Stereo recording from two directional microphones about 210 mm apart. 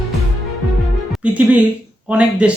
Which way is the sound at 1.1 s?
5° right (ahead or behind).